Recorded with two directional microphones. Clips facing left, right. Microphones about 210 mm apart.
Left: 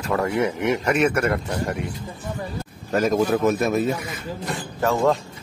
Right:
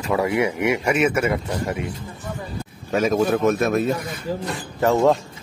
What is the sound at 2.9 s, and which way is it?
A man's voice, centre (ahead or behind).